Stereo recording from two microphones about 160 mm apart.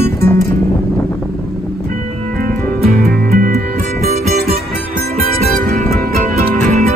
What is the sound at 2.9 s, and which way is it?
Music, 60° right (ahead or behind).